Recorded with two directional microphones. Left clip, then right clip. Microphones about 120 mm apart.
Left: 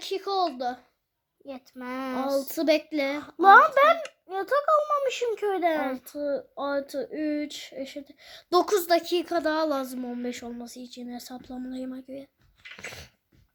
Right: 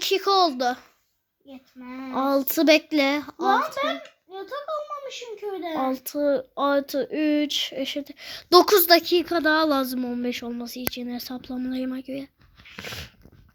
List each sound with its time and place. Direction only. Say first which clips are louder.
0.0 s speech: right 7 dB; 30° right (ahead or behind)
1.5 s speech: left 5 dB; 65° left (ahead or behind)
2.1 s speech: right 6 dB; 25° right (ahead or behind)
3.8 s speech: left 7 dB; 55° left (ahead or behind)
5.9 s speech: right 6 dB; 30° right (ahead or behind)
12.7 s dog: right 5 dB; 25° right (ahead or behind)